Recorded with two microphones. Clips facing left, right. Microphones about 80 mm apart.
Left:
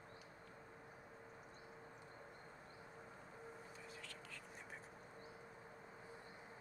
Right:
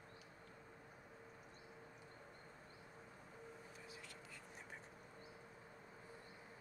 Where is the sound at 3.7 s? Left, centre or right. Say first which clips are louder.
Left 1 dB; centre.